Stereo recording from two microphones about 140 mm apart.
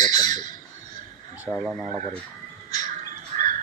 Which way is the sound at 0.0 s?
30° left (ahead or behind).